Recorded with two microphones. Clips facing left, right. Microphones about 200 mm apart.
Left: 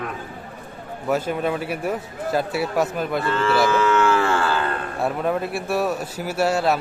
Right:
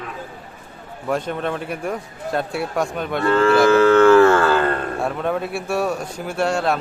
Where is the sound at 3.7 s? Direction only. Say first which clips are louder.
Right 7 dB; 55° right (ahead or behind).